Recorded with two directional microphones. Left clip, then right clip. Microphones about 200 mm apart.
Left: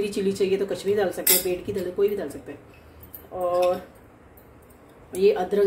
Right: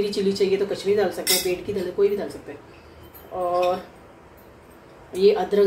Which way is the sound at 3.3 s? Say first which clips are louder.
Right 1 dB; 20° left (ahead or behind).